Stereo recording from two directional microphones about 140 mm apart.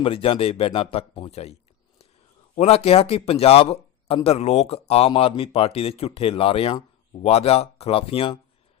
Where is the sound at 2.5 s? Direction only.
50° left (ahead or behind).